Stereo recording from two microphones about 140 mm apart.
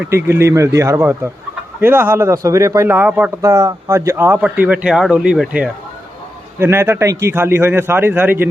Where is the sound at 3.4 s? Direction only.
20° right (ahead or behind); by 5.7 s 5° right (ahead or behind).